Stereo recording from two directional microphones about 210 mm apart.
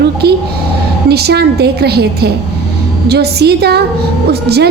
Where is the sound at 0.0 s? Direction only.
50° right (ahead or behind).